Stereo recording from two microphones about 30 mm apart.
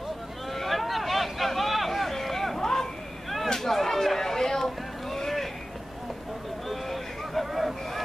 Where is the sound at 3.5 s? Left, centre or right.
Centre.